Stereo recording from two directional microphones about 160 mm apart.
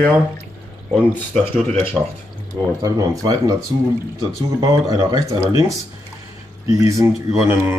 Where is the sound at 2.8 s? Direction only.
25° right (ahead or behind).